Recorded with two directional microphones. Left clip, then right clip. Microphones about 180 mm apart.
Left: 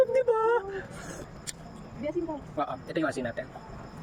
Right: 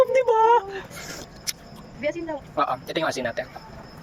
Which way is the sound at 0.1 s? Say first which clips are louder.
Right 7 dB; 15° left (ahead or behind).